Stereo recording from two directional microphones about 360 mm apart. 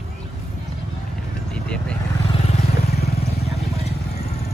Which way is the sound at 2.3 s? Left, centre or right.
Centre.